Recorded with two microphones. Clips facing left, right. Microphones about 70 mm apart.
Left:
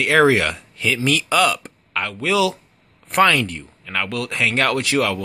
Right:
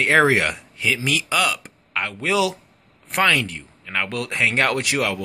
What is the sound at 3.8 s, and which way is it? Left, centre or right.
Speech, centre.